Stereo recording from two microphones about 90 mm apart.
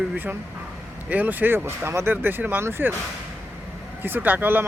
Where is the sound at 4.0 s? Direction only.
20° right (ahead or behind).